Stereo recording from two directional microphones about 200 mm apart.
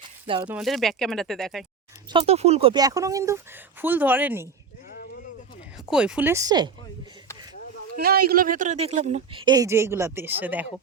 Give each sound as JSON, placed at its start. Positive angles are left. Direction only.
{"t": 0.0, "sound": "a sound", "side_deg": -25}
{"t": 0.4, "sound": "speech", "side_deg": -5}
{"t": 2.0, "sound": "speech", "side_deg": -25}
{"t": 2.8, "sound": "speech", "side_deg": -15}
{"t": 4.9, "sound": "a sound", "side_deg": 50}
{"t": 5.9, "sound": "speech", "side_deg": -5}
{"t": 7.9, "sound": "speech", "side_deg": -50}